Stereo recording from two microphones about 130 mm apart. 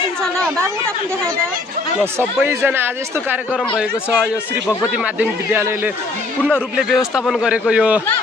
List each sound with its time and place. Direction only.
2.1 s a man's voice: 20° right (ahead or behind)
5.5 s a man's voice: 15° right (ahead or behind)
6.7 s a man's voice: centre (ahead or behind)